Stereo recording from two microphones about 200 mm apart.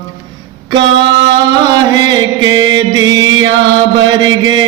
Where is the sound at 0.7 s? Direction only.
65° right (ahead or behind).